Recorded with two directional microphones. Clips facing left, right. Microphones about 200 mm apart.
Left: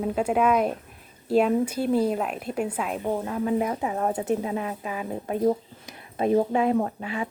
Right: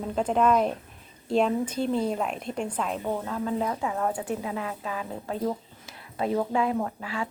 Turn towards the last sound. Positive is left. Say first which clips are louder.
# left 3 dB
turn(degrees=20)  # may be behind; listen again after turning